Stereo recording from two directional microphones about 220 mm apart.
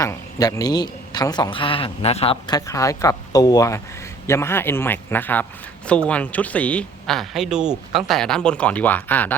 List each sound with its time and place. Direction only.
0.0 s a man's voice: 15° left (ahead or behind)